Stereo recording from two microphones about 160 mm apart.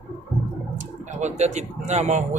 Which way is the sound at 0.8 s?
45° right (ahead or behind).